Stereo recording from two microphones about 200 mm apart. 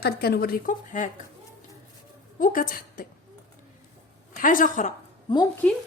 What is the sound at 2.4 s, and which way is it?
Speech, 45° left (ahead or behind).